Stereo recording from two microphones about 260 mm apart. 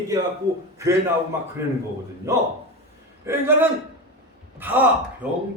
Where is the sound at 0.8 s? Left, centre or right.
Centre.